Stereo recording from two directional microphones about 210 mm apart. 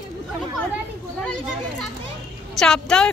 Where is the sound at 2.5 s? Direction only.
5° left (ahead or behind).